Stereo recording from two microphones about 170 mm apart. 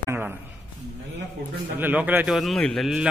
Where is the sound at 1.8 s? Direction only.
10° right (ahead or behind).